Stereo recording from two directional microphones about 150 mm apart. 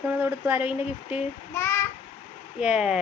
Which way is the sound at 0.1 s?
15° right (ahead or behind).